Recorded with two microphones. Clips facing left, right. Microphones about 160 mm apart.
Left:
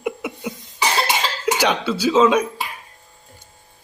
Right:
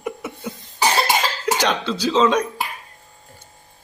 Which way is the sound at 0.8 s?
45° right (ahead or behind).